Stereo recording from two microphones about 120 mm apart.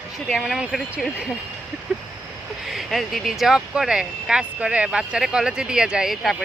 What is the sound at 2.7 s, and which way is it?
Speech, centre (ahead or behind).